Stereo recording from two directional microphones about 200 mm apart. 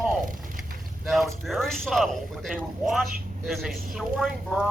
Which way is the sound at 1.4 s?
Centre (ahead or behind).